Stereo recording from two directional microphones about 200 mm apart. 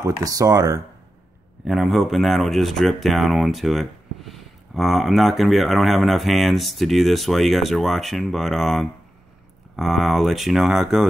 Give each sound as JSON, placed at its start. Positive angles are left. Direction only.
{"t": 0.2, "sound": "speech", "side_deg": -15}
{"t": 1.6, "sound": "speech", "side_deg": 0}